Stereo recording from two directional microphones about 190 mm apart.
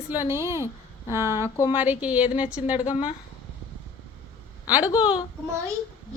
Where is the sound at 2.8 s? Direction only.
40° left (ahead or behind).